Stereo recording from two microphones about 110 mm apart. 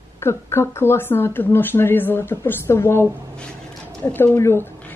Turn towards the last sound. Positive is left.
turn(degrees=20)  # may be behind; listen again after turning